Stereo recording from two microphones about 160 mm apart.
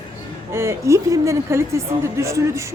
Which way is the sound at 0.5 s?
15° right (ahead or behind).